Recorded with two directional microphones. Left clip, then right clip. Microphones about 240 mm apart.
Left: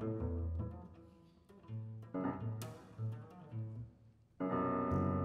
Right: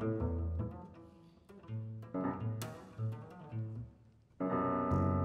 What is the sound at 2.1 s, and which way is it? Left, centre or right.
Music, centre.